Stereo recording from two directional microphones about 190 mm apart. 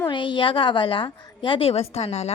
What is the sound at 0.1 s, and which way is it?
A woman's voice, 25° left (ahead or behind).